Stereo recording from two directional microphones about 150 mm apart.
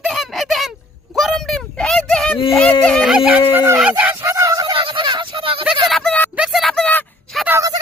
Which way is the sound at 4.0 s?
15° right (ahead or behind).